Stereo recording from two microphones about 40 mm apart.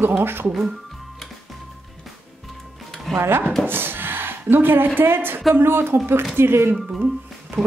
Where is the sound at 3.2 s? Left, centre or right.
Right.